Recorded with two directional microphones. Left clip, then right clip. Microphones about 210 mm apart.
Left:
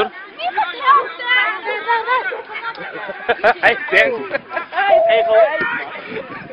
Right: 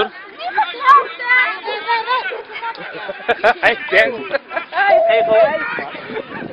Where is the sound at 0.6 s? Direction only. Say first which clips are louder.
Right 3 dB; 40° left (ahead or behind).